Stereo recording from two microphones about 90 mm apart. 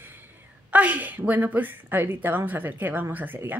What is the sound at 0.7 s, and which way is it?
Speech, 15° right (ahead or behind).